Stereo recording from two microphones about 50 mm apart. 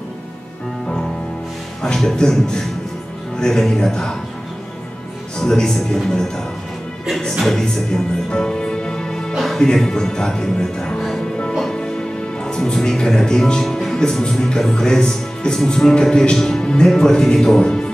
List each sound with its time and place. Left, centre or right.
1.8 s speech: centre
5.4 s speech: centre
8.3 s music: centre
9.6 s speech: centre
12.4 s speech: centre